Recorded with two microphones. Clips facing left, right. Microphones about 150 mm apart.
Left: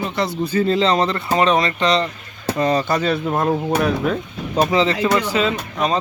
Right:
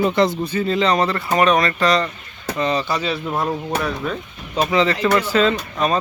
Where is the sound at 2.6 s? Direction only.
45° left (ahead or behind).